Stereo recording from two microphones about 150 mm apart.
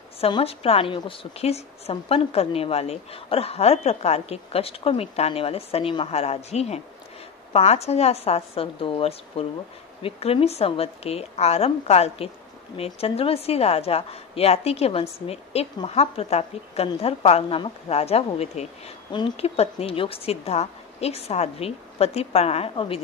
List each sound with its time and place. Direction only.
0.2 s a woman's voice: 40° left (ahead or behind)